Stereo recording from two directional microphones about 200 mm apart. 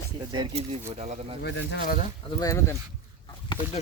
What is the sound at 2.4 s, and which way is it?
Speech, 15° left (ahead or behind).